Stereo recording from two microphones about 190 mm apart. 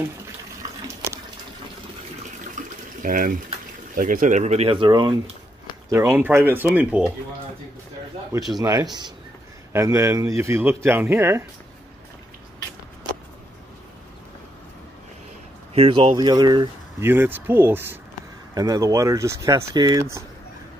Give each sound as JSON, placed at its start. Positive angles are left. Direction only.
{"t": 2.6, "sound": "water", "side_deg": -40}
{"t": 3.0, "sound": "speech", "side_deg": -45}
{"t": 5.9, "sound": "a man's voice", "side_deg": -15}
{"t": 8.3, "sound": "a man's voice", "side_deg": -20}
{"t": 15.7, "sound": "speech", "side_deg": -30}
{"t": 17.1, "sound": "a man's voice", "side_deg": -10}